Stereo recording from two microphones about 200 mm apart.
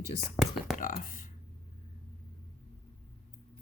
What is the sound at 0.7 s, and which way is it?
Speech, 45° left (ahead or behind).